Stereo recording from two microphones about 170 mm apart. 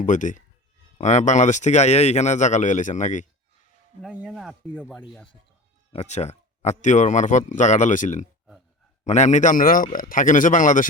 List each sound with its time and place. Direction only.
0.0 s speech: 50° left (ahead or behind)
4.0 s speech: 5° right (ahead or behind)
5.9 s speech: 40° left (ahead or behind)